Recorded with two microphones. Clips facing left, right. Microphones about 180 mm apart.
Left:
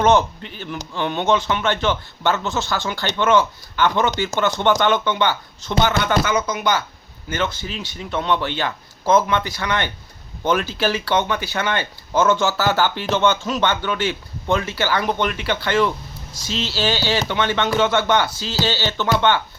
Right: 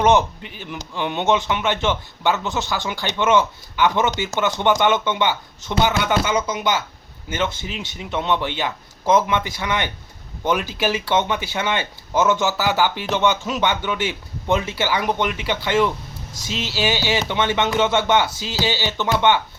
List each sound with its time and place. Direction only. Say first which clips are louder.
0.0 s speech: even; 15° right (ahead or behind)